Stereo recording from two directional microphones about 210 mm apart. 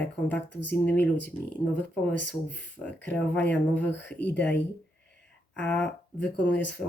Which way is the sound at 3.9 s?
55° left (ahead or behind).